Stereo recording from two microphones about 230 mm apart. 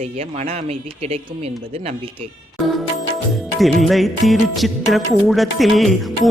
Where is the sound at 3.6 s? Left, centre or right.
Centre.